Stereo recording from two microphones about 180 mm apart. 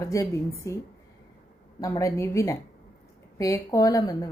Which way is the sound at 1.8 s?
15° left (ahead or behind).